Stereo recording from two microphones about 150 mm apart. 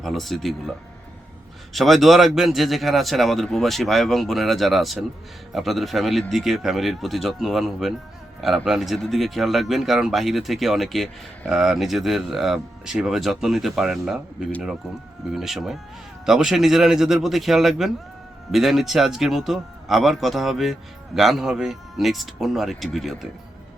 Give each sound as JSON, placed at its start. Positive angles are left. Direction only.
{"t": 0.0, "sound": "speech", "side_deg": 0}
{"t": 1.7, "sound": "speech", "side_deg": 0}
{"t": 15.3, "sound": "speech", "side_deg": 0}